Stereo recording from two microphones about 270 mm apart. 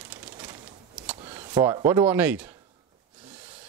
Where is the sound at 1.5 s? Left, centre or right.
Centre.